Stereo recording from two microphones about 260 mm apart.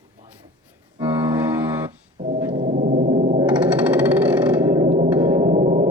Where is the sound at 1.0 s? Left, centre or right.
Centre.